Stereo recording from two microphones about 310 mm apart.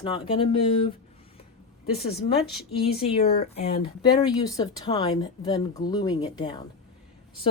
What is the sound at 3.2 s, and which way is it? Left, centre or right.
Speech, left.